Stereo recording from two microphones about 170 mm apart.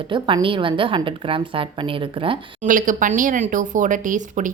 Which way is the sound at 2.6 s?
50° right (ahead or behind).